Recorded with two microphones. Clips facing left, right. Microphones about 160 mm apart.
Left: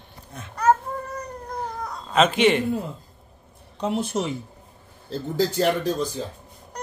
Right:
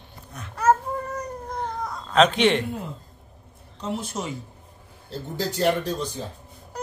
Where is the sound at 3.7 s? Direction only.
60° left (ahead or behind).